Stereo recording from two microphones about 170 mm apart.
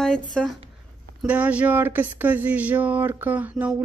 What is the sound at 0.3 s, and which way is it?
Speech, 5° left (ahead or behind).